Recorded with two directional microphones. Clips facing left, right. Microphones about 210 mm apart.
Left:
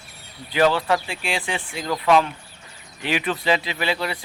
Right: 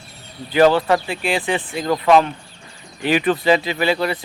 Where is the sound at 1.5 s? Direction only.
50° right (ahead or behind).